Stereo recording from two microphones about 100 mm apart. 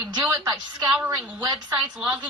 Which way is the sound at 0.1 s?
40° right (ahead or behind).